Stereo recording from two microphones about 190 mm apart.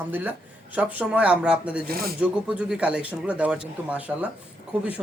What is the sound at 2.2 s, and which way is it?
A man's voice, 5° right (ahead or behind).